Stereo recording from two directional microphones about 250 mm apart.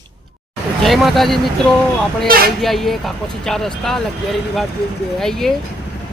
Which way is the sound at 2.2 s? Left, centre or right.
Right.